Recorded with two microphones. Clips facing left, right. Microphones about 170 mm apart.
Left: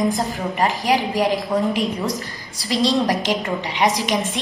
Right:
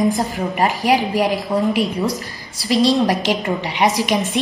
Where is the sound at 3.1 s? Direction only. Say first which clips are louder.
Right 2 dB; 10° right (ahead or behind).